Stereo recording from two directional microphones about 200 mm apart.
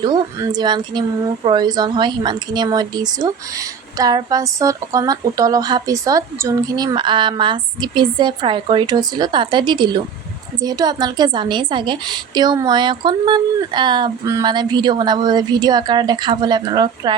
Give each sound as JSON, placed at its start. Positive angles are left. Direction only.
{"t": 0.0, "sound": "a woman's voice", "side_deg": -20}